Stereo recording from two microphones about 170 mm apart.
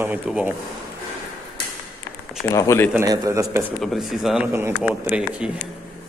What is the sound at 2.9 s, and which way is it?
Speech, 20° right (ahead or behind).